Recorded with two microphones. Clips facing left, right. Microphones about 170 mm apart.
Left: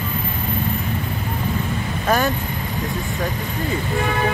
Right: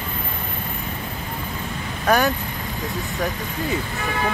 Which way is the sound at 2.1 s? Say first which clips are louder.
Right 1 dB; centre (ahead or behind).